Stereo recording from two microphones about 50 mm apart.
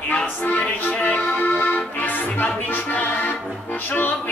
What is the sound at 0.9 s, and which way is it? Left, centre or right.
Accordion, left.